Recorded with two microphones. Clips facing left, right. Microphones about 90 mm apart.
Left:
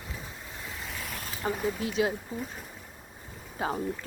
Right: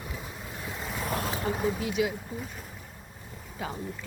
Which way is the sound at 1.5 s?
10° right (ahead or behind).